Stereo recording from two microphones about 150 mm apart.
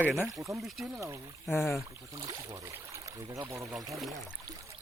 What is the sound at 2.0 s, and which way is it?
Speech, 25° right (ahead or behind).